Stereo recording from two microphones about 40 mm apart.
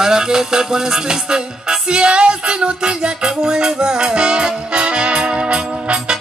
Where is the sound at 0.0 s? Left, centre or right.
Centre.